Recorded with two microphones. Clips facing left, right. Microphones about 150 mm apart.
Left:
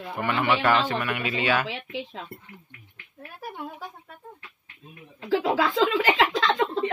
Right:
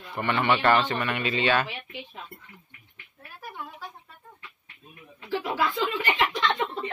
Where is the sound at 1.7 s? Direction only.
90° left.